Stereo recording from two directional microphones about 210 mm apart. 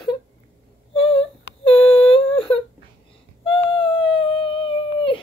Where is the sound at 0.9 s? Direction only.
25° left (ahead or behind).